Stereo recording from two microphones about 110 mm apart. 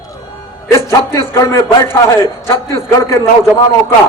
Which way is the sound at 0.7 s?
25° left (ahead or behind).